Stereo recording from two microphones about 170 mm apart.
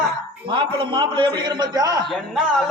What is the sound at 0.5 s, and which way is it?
A man's voice, 30° right (ahead or behind).